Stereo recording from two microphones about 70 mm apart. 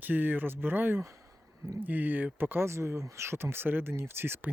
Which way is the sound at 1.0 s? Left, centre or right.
Right.